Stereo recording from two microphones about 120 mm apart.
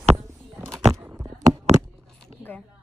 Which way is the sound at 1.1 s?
30° right (ahead or behind).